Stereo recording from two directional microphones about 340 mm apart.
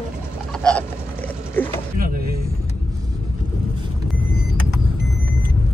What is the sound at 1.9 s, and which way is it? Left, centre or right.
Music, right.